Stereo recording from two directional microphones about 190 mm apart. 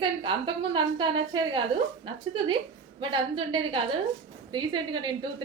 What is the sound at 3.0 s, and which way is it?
A woman's voice, 25° right (ahead or behind).